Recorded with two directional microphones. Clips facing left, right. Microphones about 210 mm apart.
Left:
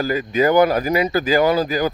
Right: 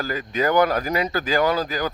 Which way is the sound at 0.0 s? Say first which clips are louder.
Left 6 dB; 10° left (ahead or behind).